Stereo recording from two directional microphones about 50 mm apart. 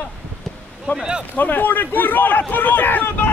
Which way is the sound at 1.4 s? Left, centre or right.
Left.